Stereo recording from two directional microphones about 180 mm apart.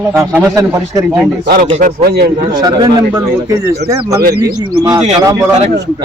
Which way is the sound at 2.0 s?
60° right (ahead or behind).